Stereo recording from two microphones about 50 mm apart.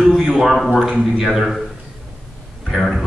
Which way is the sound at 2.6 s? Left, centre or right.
Centre.